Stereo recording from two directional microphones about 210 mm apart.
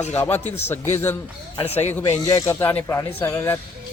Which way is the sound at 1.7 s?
10° left (ahead or behind).